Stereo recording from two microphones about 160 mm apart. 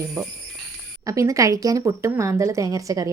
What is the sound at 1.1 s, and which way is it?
A woman's voice, 20° right (ahead or behind).